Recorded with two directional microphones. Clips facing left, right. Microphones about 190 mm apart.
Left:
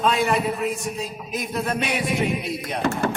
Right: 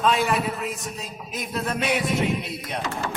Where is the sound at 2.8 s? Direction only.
55° left (ahead or behind).